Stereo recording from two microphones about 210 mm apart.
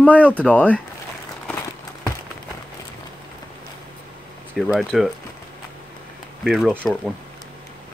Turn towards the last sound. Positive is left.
turn(degrees=0)  # may be behind; listen again after turning